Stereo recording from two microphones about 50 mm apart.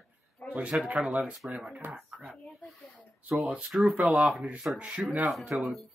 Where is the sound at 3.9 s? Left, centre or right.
Right.